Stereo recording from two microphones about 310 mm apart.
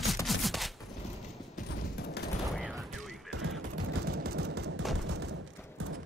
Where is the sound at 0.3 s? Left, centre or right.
Centre.